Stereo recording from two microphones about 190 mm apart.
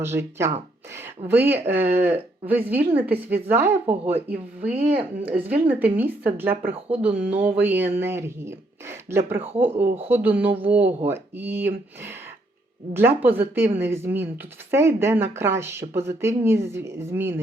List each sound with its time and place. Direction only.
0.0 s speech: 15° right (ahead or behind)
4.7 s speech: 30° right (ahead or behind)
5.3 s speech: 10° right (ahead or behind)